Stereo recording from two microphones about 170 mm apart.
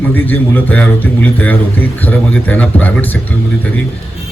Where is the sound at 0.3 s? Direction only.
10° left (ahead or behind).